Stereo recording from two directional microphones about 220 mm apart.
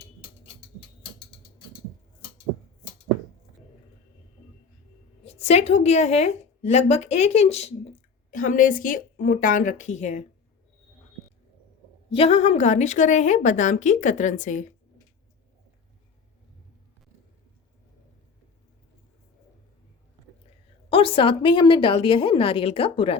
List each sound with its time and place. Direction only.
5.2 s a woman's voice: 30° left (ahead or behind)
12.1 s a woman's voice: 30° left (ahead or behind)
20.9 s a woman's voice: 25° left (ahead or behind)